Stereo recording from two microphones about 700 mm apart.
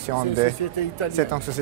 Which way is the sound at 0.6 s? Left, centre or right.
Left.